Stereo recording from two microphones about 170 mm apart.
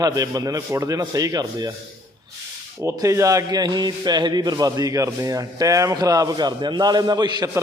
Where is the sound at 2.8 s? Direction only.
20° right (ahead or behind).